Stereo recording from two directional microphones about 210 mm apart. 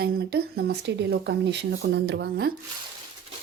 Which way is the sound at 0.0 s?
45° right (ahead or behind).